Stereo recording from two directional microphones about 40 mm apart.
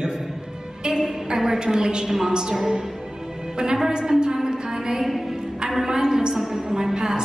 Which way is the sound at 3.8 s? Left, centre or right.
Centre.